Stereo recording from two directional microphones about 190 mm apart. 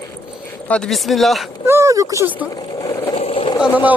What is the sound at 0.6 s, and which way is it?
Speech, 5° left (ahead or behind).